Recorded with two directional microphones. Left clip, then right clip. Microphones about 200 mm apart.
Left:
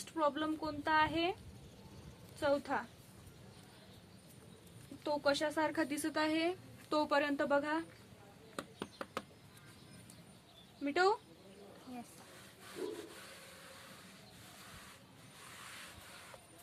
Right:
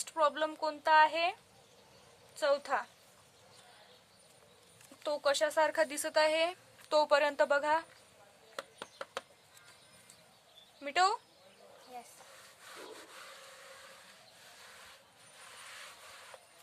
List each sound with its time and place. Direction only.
0.0 s speech: 50° right (ahead or behind)
2.4 s speech: 50° right (ahead or behind)
5.0 s speech: 50° right (ahead or behind)
8.8 s a sound: centre (ahead or behind)
10.8 s speech: 50° right (ahead or behind)